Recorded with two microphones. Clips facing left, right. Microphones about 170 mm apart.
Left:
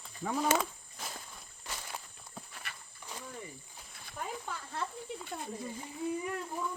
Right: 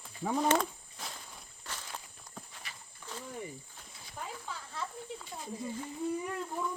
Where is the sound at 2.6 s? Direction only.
60° left (ahead or behind).